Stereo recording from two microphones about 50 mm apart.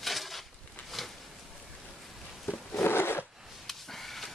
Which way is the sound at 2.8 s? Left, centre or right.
Left.